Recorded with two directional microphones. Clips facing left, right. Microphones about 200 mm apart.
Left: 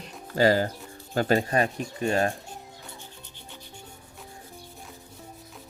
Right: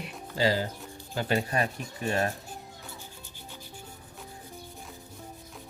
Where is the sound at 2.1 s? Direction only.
30° left (ahead or behind).